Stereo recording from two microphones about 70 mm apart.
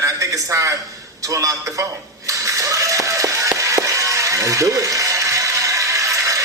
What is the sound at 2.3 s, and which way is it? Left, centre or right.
Ratchet, right.